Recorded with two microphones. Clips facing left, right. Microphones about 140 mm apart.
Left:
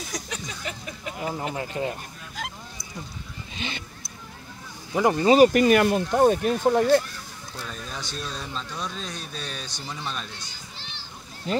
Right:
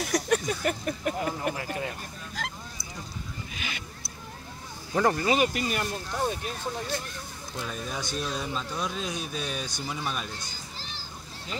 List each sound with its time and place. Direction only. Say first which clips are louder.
0.0 s speech: right 9 dB; 60° right (ahead or behind)
1.6 s speech: left 4 dB; 25° left (ahead or behind)
2.4 s honk: left 1 dB; centre (ahead or behind)
3.5 s speech: left 6 dB; 30° left (ahead or behind)
5.1 s speech: left 9 dB; 30° left (ahead or behind)
5.5 s speech: left 12 dB; 70° left (ahead or behind)
7.6 s speech: right 2 dB; 10° right (ahead or behind)
10.8 s water: right 1 dB; 40° right (ahead or behind)